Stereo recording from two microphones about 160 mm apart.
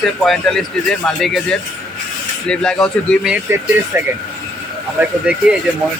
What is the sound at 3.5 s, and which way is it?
Speech, 15° right (ahead or behind).